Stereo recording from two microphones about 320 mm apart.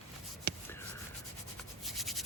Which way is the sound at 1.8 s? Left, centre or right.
Centre.